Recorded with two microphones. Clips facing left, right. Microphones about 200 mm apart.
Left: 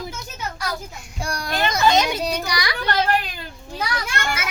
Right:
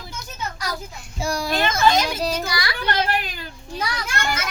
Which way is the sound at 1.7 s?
20° left (ahead or behind).